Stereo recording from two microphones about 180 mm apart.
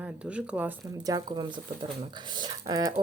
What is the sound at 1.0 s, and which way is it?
Speech, 20° right (ahead or behind).